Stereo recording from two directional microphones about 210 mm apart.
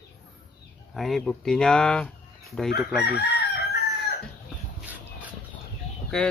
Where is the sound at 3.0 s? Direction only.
50° left (ahead or behind).